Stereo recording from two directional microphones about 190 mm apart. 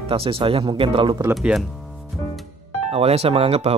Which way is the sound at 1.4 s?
Centre (ahead or behind).